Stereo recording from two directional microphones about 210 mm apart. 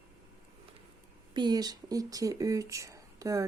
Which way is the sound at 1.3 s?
20° right (ahead or behind).